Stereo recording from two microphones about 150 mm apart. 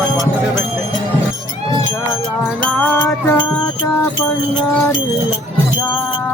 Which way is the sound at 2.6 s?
15° left (ahead or behind).